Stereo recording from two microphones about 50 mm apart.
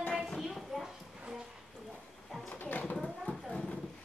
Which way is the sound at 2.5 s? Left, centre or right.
Left.